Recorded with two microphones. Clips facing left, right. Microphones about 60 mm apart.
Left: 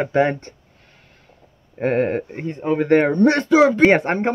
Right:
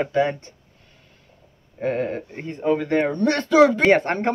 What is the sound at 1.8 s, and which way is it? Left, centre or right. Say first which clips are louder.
Speech: left 5 dB; left.